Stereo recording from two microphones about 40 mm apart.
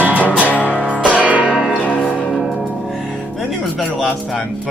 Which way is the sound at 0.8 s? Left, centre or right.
Right.